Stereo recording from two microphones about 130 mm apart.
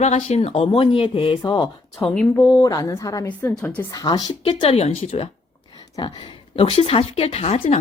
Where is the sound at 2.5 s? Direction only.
25° left (ahead or behind).